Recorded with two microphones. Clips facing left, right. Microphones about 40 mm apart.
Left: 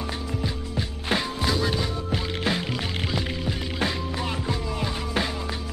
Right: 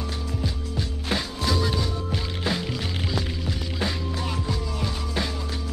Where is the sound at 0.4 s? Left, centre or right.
Centre.